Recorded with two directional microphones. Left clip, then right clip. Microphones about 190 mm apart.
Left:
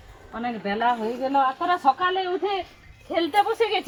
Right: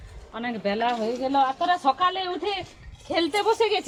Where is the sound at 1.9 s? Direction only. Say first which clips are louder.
Even; 40° right (ahead or behind).